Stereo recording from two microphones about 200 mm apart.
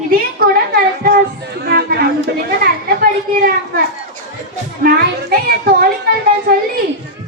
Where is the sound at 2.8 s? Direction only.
45° right (ahead or behind).